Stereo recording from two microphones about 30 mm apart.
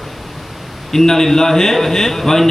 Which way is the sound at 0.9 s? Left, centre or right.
Centre.